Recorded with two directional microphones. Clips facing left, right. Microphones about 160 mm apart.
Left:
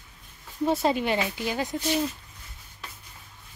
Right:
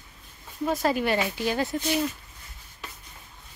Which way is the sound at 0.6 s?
25° left (ahead or behind).